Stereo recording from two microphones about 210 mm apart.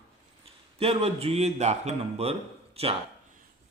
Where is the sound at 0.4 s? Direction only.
30° right (ahead or behind).